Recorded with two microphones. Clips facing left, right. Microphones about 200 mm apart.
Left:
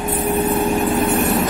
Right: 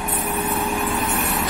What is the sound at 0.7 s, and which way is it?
Vehicle, 45° left (ahead or behind).